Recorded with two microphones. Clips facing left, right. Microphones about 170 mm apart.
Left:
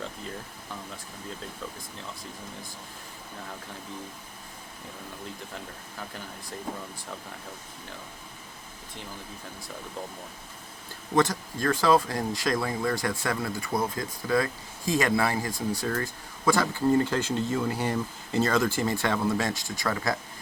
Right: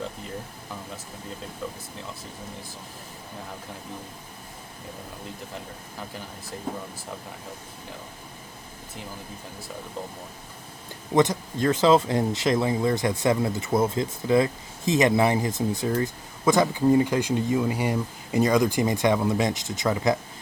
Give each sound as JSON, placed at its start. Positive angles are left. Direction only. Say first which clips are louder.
{"t": 11.1, "sound": "speech", "louder": "right 3 dB", "side_deg": -20}